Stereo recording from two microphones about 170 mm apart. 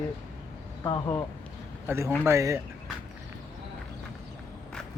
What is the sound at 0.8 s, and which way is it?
Speech, 20° left (ahead or behind).